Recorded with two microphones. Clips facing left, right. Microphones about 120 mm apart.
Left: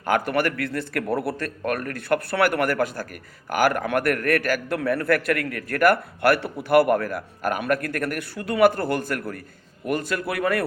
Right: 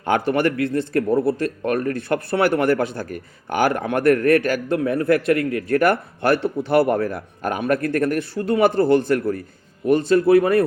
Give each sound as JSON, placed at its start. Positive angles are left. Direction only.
{"t": 0.0, "sound": "a man's voice", "side_deg": -25}